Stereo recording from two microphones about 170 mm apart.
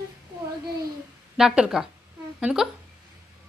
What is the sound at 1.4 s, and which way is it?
Speech, 5° right (ahead or behind).